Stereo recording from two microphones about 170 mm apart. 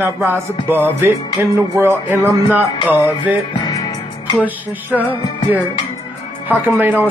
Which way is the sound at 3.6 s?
25° left (ahead or behind).